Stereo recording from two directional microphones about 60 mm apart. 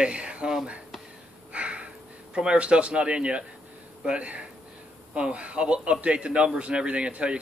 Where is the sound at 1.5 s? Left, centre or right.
Right.